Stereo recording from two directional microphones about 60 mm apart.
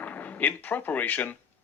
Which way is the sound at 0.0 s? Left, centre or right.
Left.